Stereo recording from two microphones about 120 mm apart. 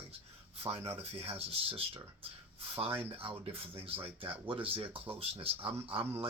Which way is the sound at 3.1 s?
50° right (ahead or behind).